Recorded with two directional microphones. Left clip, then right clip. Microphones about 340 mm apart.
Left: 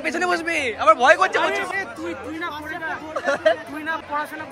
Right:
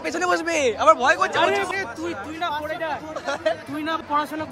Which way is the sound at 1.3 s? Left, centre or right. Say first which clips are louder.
Right 1 dB; right.